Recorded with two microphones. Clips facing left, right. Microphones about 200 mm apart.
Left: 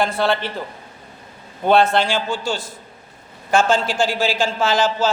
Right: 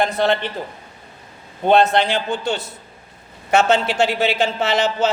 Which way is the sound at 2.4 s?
65° right (ahead or behind).